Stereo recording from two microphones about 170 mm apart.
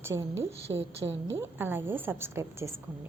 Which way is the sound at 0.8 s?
90° right.